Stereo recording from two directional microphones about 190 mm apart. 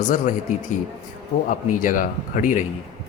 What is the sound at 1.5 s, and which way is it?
Speech, 45° left (ahead or behind).